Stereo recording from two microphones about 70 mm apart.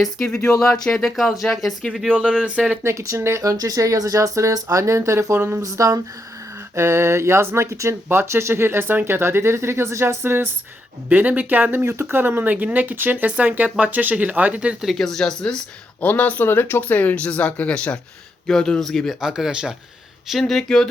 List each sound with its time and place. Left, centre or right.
0.0 s speech: centre
0.3 s speech: left
0.6 s speech: centre
1.1 s speech: centre
2.1 s speech: right
2.8 s speech: right
3.4 s speech: right
6.7 s speech: right
11.9 s speech: right; by 14.8 s centre
14.8 s speech: centre
16.0 s speech: left; by 19.1 s centre
19.2 s speech: centre
20.4 s speech: centre